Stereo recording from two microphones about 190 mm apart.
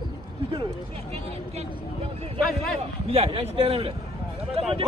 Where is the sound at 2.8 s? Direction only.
30° right (ahead or behind).